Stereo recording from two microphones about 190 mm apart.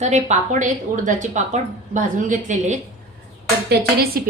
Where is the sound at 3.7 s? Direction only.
55° right (ahead or behind).